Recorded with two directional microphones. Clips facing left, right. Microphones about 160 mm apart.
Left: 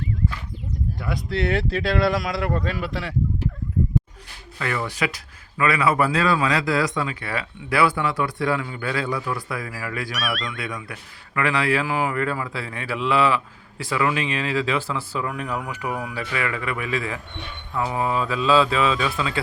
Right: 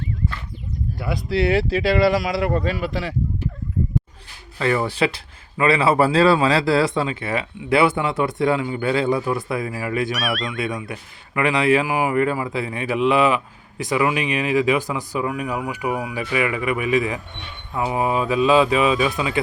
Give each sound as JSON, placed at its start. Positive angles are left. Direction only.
{"t": 0.9, "sound": "speech", "side_deg": -5}
{"t": 4.5, "sound": "speech", "side_deg": -30}
{"t": 10.2, "sound": "speech", "side_deg": 0}
{"t": 10.6, "sound": "speech", "side_deg": -20}